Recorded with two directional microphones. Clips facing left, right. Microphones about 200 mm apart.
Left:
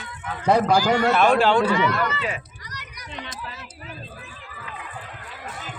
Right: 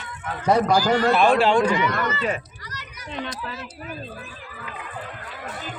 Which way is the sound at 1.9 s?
45° right (ahead or behind).